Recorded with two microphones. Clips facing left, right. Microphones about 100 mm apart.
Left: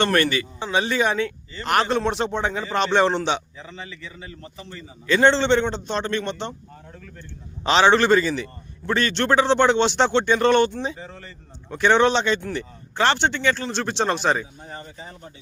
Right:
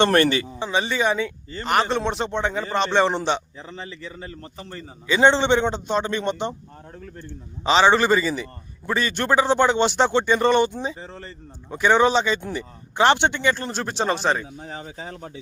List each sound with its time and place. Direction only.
0.0 s a man's voice: 30° right (ahead or behind)
0.6 s speech: centre (ahead or behind)
3.6 s a man's voice: 35° right (ahead or behind)
5.0 s a man's voice: 15° right (ahead or behind)
7.6 s speech: centre (ahead or behind)
11.0 s a man's voice: 30° right (ahead or behind)
11.7 s speech: 5° right (ahead or behind)
12.5 s speech: 15° right (ahead or behind); by 14.4 s centre (ahead or behind)
14.6 s speech: 90° right